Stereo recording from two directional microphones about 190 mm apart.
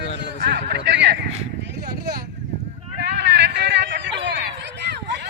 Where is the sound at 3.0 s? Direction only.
65° right (ahead or behind).